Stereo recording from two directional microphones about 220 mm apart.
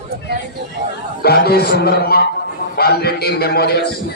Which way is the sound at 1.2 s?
45° left (ahead or behind).